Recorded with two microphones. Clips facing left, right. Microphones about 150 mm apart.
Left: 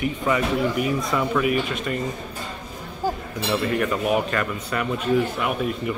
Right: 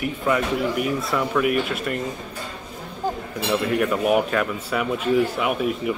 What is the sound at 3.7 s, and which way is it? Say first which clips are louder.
Speech: right 4 dB; 5° right (ahead or behind).